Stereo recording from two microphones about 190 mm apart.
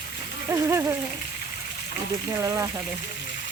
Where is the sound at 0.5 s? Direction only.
15° right (ahead or behind).